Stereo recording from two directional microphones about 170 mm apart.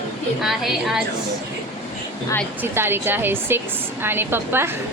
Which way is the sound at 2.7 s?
15° right (ahead or behind).